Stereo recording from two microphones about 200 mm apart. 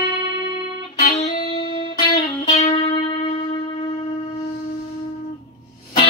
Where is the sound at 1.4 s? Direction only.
25° left (ahead or behind).